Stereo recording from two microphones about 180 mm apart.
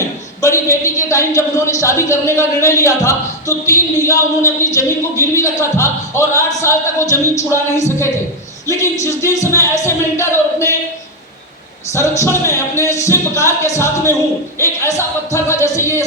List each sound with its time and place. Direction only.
0.4 s a man's voice: 15° left (ahead or behind)
11.9 s a man's voice: 15° left (ahead or behind)